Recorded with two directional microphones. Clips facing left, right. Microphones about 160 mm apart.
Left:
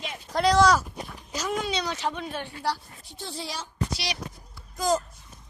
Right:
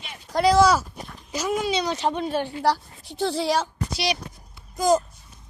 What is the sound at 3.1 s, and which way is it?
Speech, 80° right.